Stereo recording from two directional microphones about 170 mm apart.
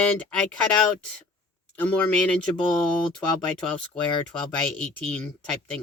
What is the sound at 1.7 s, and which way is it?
Speech, 10° left (ahead or behind).